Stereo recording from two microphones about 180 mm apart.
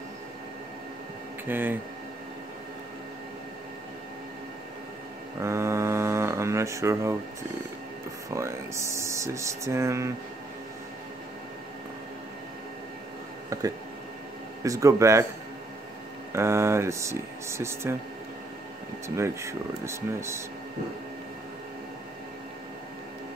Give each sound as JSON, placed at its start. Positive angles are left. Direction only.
{"t": 1.5, "sound": "speech", "side_deg": -10}
{"t": 5.4, "sound": "mantra", "side_deg": -15}
{"t": 8.3, "sound": "speech", "side_deg": -15}
{"t": 13.5, "sound": "speech", "side_deg": -20}
{"t": 16.3, "sound": "speech", "side_deg": -15}
{"t": 19.0, "sound": "speech", "side_deg": -15}